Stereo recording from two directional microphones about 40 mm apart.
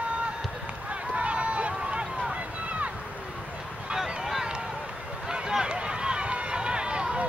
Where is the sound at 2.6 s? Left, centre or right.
Right.